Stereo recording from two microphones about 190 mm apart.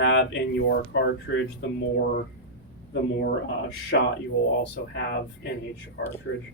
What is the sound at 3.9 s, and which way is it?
Speech, 65° left (ahead or behind).